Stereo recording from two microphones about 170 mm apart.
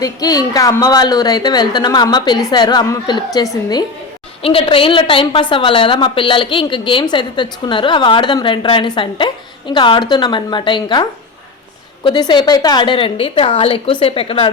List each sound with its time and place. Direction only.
0.0 s a woman's voice: 20° left (ahead or behind)
12.0 s a woman's voice: 25° left (ahead or behind)